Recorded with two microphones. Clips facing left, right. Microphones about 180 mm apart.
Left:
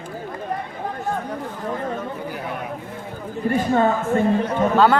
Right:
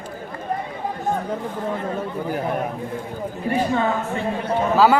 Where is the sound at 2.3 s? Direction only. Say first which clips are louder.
Right 6 dB; 45° right (ahead or behind).